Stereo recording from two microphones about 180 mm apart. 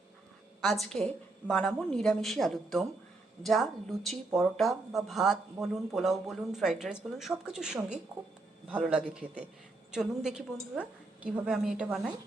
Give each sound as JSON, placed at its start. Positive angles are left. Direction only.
{"t": 0.6, "sound": "a man's voice", "side_deg": 0}